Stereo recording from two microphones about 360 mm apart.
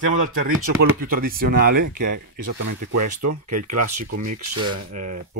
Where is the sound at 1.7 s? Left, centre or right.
Right.